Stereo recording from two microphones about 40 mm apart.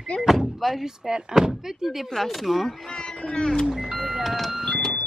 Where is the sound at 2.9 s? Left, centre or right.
Left.